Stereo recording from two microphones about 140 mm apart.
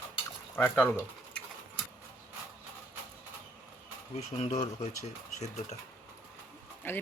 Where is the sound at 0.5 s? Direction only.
15° left (ahead or behind).